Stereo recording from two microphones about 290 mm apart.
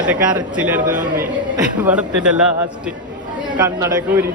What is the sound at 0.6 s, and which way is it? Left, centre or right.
Speech, centre.